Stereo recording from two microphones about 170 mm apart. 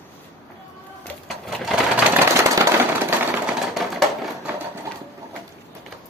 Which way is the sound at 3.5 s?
Centre (ahead or behind).